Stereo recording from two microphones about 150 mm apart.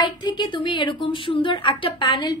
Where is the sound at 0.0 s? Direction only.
30° left (ahead or behind).